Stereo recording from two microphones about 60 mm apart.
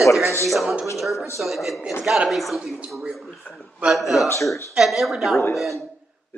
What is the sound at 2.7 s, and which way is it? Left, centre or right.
Speech, centre.